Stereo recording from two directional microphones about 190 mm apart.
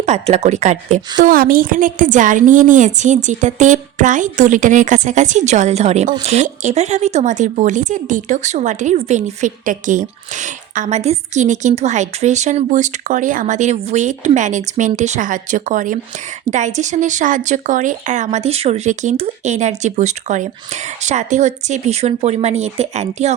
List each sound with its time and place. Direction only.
0.0 s speech: 35° right (ahead or behind)
1.2 s speech: 50° right (ahead or behind)